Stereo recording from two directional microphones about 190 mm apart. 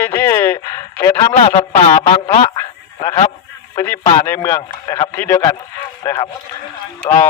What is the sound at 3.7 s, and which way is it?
A man's voice, 15° left (ahead or behind).